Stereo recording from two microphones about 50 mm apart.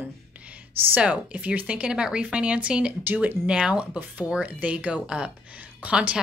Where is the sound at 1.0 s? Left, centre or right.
Right.